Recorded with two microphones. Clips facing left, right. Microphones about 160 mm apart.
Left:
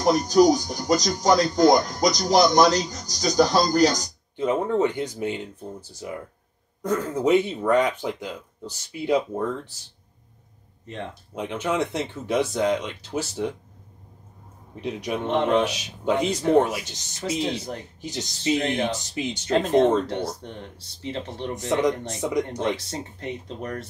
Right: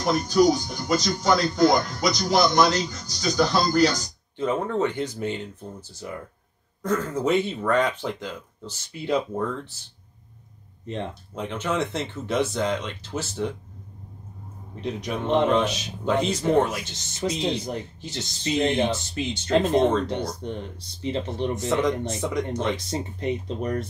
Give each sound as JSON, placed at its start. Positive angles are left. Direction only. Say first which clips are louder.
{"t": 0.0, "sound": "speech", "louder": "left 2 dB", "side_deg": 40}
{"t": 4.4, "sound": "speech", "louder": "left 2 dB", "side_deg": 15}
{"t": 11.3, "sound": "speech", "louder": "left 1 dB", "side_deg": 10}
{"t": 14.8, "sound": "speech", "louder": "left 1 dB", "side_deg": 10}
{"t": 21.0, "sound": "speech", "louder": "right 4 dB", "side_deg": -20}
{"t": 21.6, "sound": "speech", "louder": "left 2 dB", "side_deg": 15}
{"t": 22.8, "sound": "speech", "louder": "right 5 dB", "side_deg": -15}